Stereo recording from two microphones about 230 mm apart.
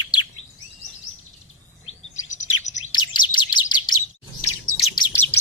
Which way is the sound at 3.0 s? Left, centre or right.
Centre.